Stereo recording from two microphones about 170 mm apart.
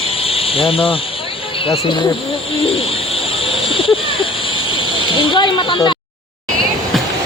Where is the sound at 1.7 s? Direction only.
25° left (ahead or behind).